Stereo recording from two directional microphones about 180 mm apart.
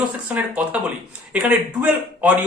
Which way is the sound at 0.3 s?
10° right (ahead or behind).